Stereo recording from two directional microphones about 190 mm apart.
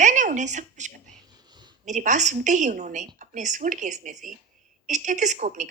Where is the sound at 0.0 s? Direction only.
40° right (ahead or behind).